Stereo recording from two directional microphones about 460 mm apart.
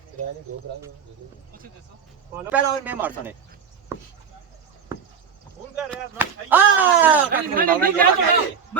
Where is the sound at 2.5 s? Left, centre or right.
Centre.